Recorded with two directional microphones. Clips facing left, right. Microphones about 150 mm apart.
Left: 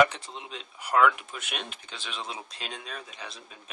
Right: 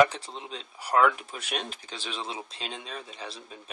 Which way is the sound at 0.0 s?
35° right (ahead or behind).